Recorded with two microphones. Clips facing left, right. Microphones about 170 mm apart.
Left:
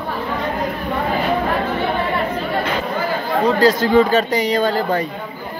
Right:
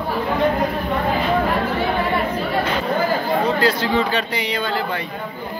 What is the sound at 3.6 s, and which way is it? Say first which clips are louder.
A man's voice: left 5 dB; 45° left (ahead or behind).